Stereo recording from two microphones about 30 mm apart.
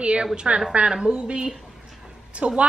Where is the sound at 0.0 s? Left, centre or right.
Right.